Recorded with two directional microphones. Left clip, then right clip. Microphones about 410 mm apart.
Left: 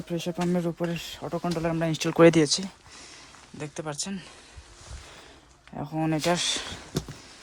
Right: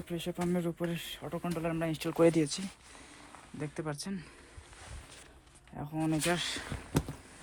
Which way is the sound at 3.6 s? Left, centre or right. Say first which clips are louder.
Left 5 dB; centre.